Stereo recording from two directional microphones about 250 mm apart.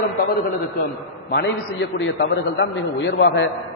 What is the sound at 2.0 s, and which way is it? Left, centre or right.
A man's voice, left.